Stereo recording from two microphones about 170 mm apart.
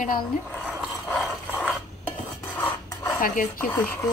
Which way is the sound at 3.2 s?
55° left (ahead or behind).